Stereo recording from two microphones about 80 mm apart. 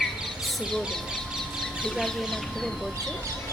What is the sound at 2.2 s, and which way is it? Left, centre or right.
Speech, centre.